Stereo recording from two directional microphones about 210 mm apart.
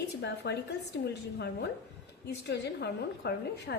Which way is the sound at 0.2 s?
55° left (ahead or behind).